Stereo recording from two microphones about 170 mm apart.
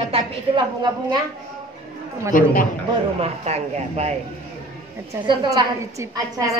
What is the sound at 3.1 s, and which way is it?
A woman's voice, 35° right (ahead or behind).